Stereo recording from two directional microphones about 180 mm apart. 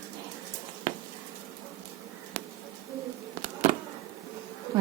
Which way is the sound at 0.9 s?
40° right (ahead or behind).